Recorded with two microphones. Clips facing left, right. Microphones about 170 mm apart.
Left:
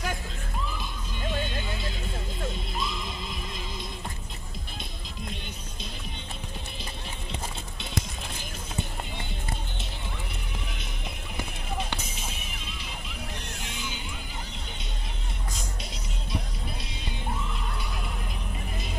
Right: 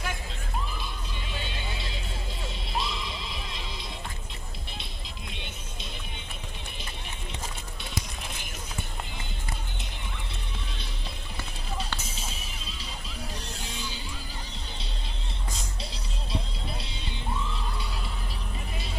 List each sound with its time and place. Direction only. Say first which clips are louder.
1.2 s vehicle: left 8 dB; 50° left (ahead or behind)
2.4 s music: even; 50° left (ahead or behind)
13.4 s a sound: even; 35° right (ahead or behind)